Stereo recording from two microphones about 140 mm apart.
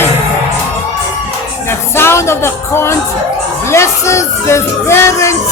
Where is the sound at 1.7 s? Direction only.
15° left (ahead or behind).